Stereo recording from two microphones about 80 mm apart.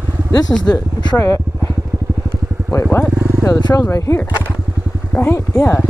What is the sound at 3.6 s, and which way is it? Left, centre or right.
Speech, left.